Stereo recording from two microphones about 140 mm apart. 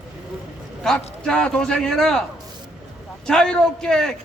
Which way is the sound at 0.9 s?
5° left (ahead or behind).